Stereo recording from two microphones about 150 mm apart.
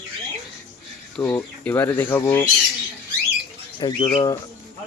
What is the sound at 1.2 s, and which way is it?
Speech, 15° left (ahead or behind).